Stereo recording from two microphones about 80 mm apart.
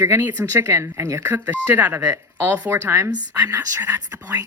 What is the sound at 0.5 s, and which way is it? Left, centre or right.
Speech, right.